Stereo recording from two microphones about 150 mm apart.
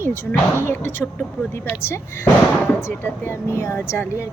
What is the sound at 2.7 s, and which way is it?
Speech, 15° left (ahead or behind).